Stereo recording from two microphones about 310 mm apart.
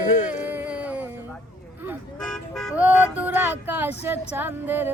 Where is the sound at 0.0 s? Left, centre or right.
Left.